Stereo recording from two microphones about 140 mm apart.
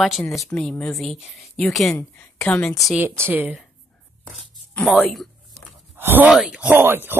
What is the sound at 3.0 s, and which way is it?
Speech, 15° right (ahead or behind).